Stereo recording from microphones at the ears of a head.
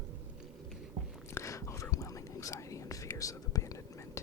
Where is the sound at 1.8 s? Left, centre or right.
Left.